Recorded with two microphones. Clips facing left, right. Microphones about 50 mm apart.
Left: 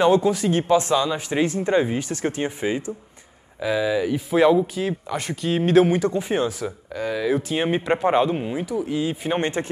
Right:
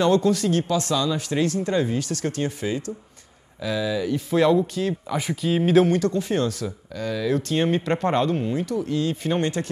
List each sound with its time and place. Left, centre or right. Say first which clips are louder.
0.0 s speech: left 2 dB; centre
5.0 s speech: right 1 dB; centre
5.9 s speech: left 1 dB; centre
9.4 s speech: left 1 dB; left